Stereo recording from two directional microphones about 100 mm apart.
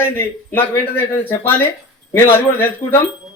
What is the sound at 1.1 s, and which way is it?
A man's voice, 20° left (ahead or behind).